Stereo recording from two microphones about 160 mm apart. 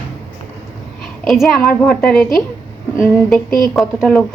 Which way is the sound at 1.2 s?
Centre (ahead or behind).